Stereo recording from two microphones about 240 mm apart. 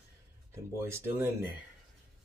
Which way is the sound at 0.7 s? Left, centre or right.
Centre.